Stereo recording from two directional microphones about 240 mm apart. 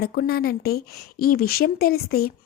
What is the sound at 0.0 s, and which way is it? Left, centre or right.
Speech, left.